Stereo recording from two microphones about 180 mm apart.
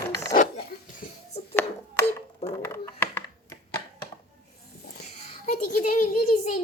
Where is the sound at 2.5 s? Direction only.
15° left (ahead or behind).